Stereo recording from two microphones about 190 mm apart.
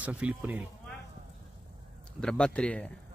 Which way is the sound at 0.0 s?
5° right (ahead or behind).